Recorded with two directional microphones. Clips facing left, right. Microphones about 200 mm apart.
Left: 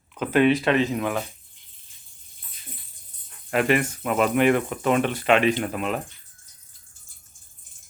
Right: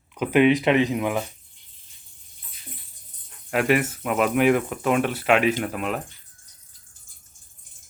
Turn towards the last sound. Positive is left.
turn(degrees=0)  # may be behind; listen again after turning